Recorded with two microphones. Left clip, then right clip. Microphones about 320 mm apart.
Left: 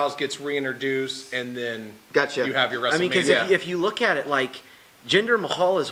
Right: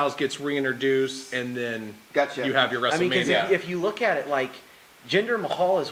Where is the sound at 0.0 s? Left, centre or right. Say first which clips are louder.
Even; right.